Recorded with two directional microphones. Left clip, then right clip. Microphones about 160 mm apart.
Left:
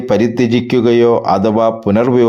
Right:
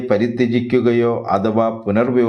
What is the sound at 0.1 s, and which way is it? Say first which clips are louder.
A man's voice: left 4 dB; 40° left (ahead or behind).